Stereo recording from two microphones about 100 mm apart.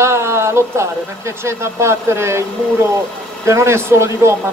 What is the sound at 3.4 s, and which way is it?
Speech, 25° right (ahead or behind).